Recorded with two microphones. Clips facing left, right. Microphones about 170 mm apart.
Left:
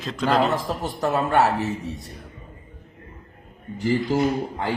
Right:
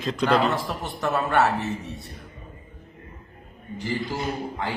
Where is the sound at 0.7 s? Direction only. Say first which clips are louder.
Left 3 dB; 40° left (ahead or behind).